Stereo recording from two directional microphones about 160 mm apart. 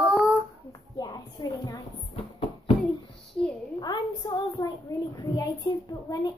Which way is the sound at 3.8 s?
25° left (ahead or behind).